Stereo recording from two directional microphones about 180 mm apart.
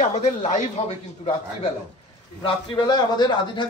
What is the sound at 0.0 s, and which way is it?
A man's voice, 40° left (ahead or behind).